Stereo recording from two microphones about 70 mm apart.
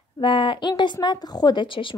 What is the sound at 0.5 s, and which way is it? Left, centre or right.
Speech, left.